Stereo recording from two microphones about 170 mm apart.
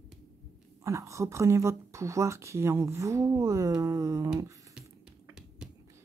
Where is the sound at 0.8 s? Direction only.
20° right (ahead or behind).